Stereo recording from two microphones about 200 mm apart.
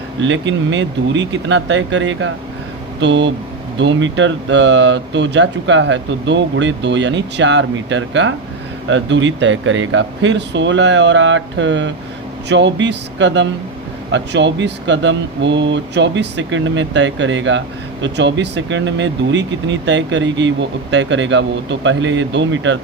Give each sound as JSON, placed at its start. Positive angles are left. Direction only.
{"t": 0.2, "sound": "speech", "side_deg": -65}